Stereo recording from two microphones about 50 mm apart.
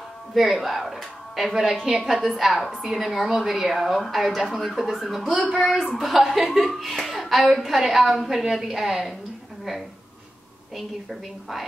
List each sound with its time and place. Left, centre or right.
0.3 s speech: centre
5.0 s speech: centre
5.3 s speech: right
5.6 s speech: centre
11.1 s speech: centre